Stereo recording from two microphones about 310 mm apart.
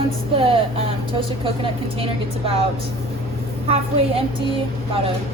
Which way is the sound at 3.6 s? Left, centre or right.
Centre.